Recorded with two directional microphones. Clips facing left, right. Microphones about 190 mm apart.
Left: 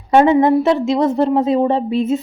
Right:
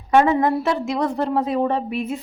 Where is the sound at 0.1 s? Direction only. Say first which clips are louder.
Left 5 dB; 25° left (ahead or behind).